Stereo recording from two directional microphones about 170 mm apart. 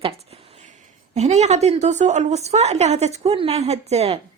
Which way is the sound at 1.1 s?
40° right (ahead or behind).